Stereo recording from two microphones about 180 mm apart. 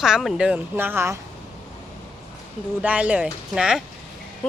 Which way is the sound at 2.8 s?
5° right (ahead or behind).